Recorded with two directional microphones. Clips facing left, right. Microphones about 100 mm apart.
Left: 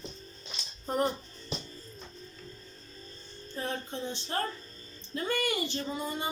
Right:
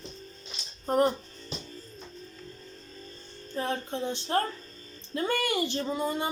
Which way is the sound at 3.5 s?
65° right (ahead or behind).